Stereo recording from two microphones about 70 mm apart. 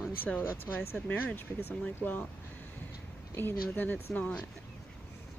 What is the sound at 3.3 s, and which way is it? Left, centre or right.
Speech, left.